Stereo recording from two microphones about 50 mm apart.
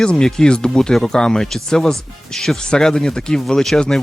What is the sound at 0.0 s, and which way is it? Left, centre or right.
Speech, centre.